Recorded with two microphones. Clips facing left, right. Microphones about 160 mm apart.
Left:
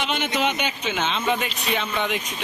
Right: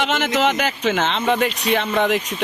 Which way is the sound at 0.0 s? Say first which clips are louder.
Right 5 dB; 85° right.